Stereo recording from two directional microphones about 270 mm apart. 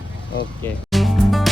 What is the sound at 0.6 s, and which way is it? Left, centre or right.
Music, centre.